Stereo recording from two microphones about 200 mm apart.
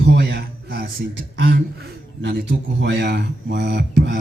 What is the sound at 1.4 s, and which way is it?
Speech, 45° right (ahead or behind).